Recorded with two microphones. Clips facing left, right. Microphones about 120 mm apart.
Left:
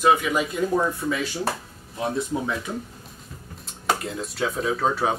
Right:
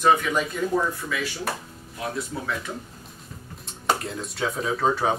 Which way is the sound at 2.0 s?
25° left (ahead or behind).